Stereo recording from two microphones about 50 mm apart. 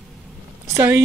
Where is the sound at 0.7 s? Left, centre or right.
Right.